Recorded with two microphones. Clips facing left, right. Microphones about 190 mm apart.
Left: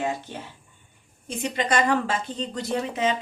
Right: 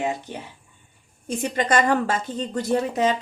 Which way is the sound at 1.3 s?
45° right (ahead or behind).